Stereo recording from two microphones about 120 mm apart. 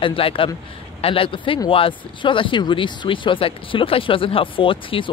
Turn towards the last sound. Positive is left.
turn(degrees=45)  # may be behind; listen again after turning